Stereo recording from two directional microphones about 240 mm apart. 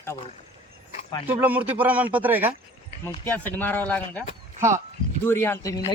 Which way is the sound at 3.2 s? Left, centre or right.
Centre.